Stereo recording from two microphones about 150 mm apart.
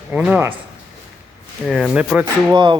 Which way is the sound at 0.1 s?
10° right (ahead or behind).